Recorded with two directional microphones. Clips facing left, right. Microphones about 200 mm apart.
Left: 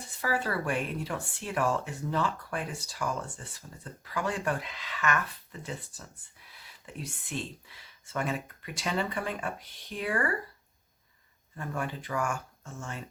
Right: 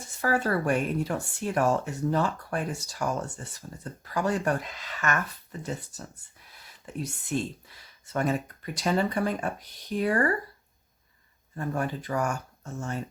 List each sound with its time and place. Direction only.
0.2 s speech: 45° right (ahead or behind)
11.5 s speech: 40° right (ahead or behind)